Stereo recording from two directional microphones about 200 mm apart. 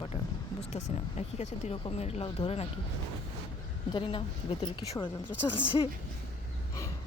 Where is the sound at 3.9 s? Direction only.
25° left (ahead or behind).